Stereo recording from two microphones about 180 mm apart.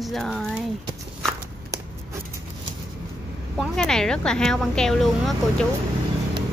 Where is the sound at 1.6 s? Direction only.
15° right (ahead or behind).